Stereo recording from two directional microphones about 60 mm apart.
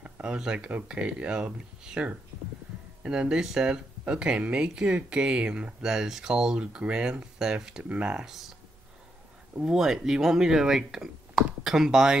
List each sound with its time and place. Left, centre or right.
0.0 s speech: centre
3.0 s speech: centre
8.3 s speech: centre
9.6 s speech: centre